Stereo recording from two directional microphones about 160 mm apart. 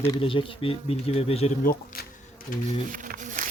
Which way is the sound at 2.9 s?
55° right (ahead or behind).